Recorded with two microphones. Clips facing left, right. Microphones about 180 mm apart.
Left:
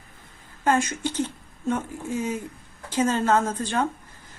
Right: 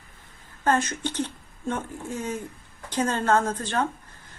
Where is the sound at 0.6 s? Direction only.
10° left (ahead or behind).